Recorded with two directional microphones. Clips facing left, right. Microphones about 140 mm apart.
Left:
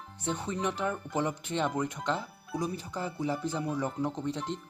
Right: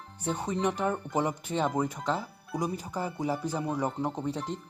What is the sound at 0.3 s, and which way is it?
Speech, 15° right (ahead or behind).